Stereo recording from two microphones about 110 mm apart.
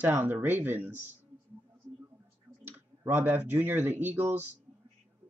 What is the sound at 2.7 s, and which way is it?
Speech, 20° right (ahead or behind).